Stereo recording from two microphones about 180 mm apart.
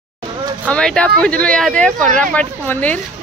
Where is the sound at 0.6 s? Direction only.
5° left (ahead or behind).